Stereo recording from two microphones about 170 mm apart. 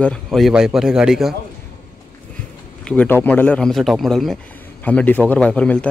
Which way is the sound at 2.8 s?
10° left (ahead or behind).